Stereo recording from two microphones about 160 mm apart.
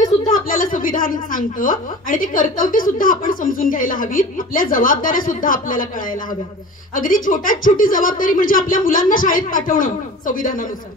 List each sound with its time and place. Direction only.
0.3 s a woman's voice: 60° left (ahead or behind)